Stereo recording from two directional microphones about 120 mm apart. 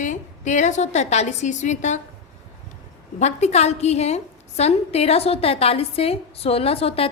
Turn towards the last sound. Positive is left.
turn(degrees=55)  # may be behind; listen again after turning